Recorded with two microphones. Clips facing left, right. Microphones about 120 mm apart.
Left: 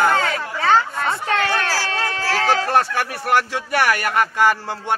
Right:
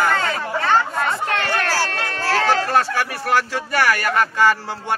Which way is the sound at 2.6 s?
15° left (ahead or behind).